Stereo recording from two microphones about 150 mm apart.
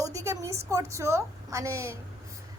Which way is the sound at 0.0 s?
20° right (ahead or behind).